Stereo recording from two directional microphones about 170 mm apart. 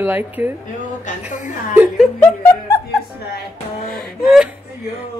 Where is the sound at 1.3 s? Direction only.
50° left (ahead or behind).